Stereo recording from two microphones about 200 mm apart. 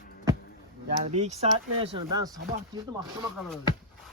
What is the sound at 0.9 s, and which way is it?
Speech, 35° right (ahead or behind).